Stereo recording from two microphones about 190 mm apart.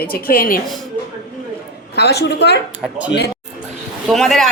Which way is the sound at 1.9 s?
60° left (ahead or behind).